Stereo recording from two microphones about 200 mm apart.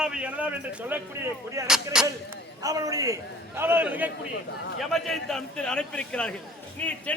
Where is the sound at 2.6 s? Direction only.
15° right (ahead or behind).